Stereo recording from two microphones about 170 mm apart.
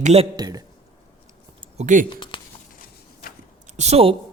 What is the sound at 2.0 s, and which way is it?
Speech, 30° left (ahead or behind).